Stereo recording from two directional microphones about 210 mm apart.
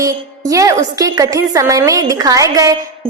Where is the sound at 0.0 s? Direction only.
15° right (ahead or behind).